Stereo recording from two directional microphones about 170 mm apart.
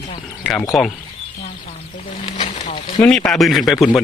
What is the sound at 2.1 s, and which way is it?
Snake, 40° left (ahead or behind).